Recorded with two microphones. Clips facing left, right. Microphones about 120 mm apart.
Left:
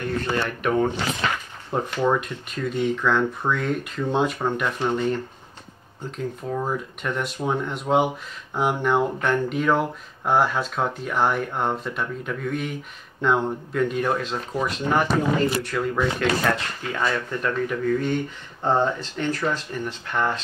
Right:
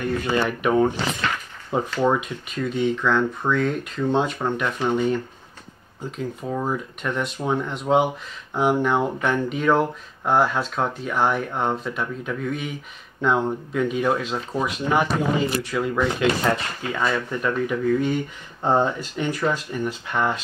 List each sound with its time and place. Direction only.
0.0 s speech: 5° right (ahead or behind)